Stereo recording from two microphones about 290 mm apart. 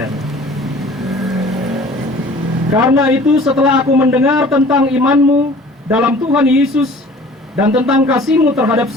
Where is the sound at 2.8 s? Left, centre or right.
Centre.